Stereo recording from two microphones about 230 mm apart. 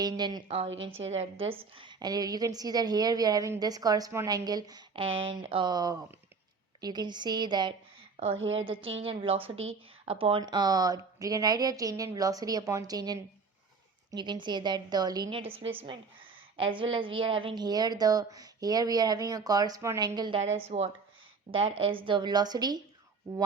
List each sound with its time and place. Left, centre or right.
0.0 s a woman's voice: centre
5.0 s speech: right
5.4 s a woman's voice: right
21.8 s a woman's voice: right